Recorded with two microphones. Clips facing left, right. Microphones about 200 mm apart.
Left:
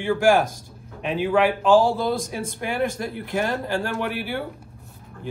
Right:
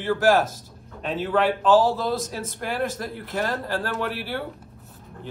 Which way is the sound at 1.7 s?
Centre (ahead or behind).